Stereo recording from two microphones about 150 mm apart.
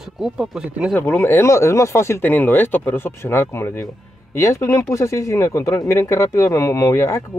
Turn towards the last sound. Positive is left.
turn(degrees=20)  # may be behind; listen again after turning